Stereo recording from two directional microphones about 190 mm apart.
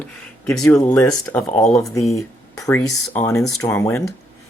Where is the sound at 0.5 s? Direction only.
5° left (ahead or behind).